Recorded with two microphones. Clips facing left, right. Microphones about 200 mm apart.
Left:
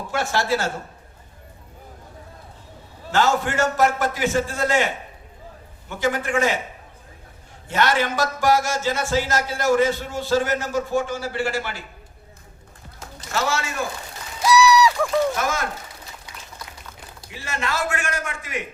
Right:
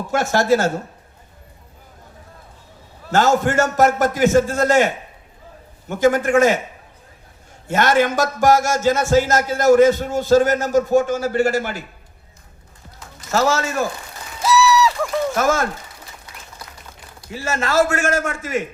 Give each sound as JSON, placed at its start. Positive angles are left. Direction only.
{"t": 0.1, "sound": "a man's voice", "side_deg": -45}
{"t": 3.1, "sound": "a man's voice", "side_deg": -45}
{"t": 5.9, "sound": "a man's voice", "side_deg": -45}
{"t": 7.7, "sound": "a man's voice", "side_deg": -45}
{"t": 13.3, "sound": "a man's voice", "side_deg": -40}
{"t": 14.4, "sound": "a sound", "side_deg": 0}
{"t": 15.4, "sound": "a man's voice", "side_deg": -45}
{"t": 17.3, "sound": "a man's voice", "side_deg": -45}